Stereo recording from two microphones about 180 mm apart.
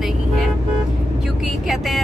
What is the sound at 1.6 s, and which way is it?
Speech, centre (ahead or behind).